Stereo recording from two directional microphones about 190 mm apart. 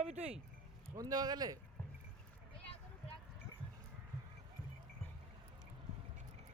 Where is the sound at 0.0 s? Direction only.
35° right (ahead or behind).